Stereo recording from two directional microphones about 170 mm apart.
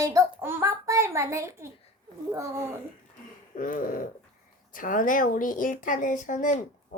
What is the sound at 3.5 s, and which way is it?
A child's voice, 55° left (ahead or behind).